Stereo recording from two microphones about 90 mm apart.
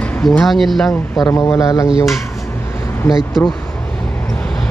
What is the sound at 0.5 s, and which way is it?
Speech, centre (ahead or behind).